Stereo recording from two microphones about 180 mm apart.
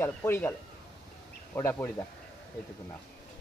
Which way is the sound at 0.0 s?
10° left (ahead or behind).